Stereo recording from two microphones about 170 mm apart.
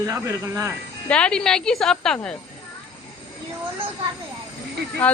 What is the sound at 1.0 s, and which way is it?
Speech, 5° left (ahead or behind).